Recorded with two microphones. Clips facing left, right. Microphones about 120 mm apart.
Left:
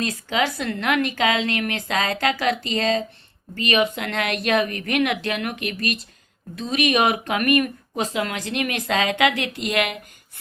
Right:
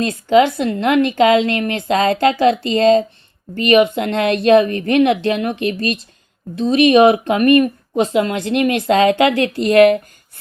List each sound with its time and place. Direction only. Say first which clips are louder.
0.0 s a woman's voice: right 10 dB; 30° right (ahead or behind)